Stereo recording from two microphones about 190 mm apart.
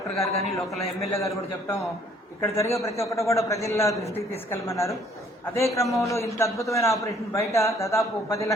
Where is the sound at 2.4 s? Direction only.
15° left (ahead or behind).